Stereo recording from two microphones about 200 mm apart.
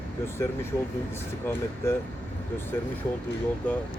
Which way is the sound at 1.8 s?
15° left (ahead or behind).